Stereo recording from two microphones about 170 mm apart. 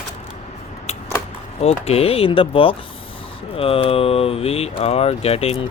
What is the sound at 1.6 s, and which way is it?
Speech, 35° left (ahead or behind).